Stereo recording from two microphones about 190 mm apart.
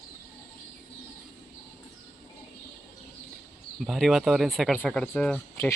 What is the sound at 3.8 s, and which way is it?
Speech, centre (ahead or behind).